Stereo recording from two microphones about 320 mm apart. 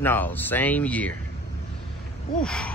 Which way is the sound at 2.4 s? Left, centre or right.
Centre.